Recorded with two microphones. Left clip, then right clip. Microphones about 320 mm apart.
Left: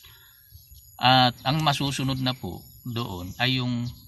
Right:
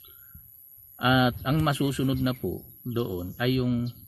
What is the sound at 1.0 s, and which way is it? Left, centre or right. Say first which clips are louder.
Speech: left 5 dB; left.